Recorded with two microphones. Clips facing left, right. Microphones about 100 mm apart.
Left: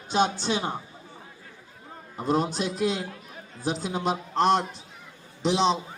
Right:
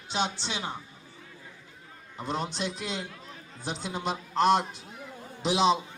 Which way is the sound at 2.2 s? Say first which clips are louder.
Left 6 dB; 45° left (ahead or behind).